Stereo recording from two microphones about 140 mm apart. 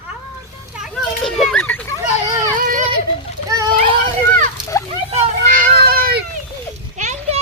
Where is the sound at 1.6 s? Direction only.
15° left (ahead or behind).